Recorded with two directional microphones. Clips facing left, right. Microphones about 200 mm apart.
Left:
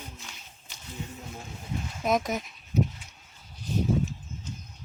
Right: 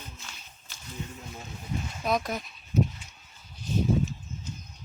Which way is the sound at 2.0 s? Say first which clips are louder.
Left 2 dB; 20° left (ahead or behind).